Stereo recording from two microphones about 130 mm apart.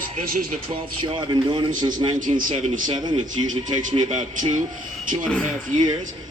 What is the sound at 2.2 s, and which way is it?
Speech, 85° right.